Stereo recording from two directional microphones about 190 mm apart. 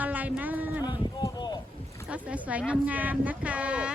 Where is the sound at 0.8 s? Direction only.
20° left (ahead or behind).